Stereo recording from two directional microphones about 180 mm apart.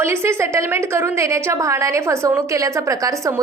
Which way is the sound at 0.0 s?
15° right (ahead or behind).